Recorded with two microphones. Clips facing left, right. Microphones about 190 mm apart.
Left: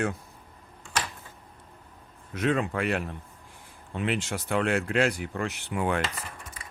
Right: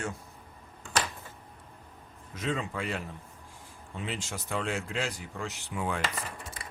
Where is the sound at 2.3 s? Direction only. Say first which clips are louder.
Left 7 dB; 65° left (ahead or behind).